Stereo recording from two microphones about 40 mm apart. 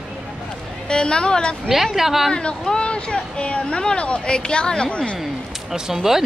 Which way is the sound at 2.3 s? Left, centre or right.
Centre.